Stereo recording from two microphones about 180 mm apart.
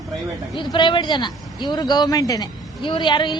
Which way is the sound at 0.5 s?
25° left (ahead or behind).